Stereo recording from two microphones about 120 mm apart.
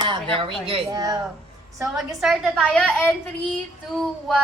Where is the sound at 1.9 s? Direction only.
Centre (ahead or behind).